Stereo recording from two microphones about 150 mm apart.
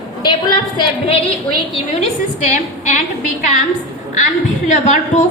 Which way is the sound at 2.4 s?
55° left (ahead or behind).